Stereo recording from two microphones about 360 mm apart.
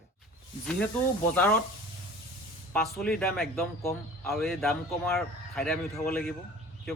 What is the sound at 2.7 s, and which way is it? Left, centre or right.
Speech, centre.